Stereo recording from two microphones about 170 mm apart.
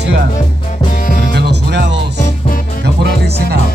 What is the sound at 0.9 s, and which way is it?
Music, 50° left (ahead or behind).